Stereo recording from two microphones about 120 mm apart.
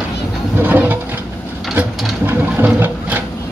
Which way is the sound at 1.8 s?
15° right (ahead or behind).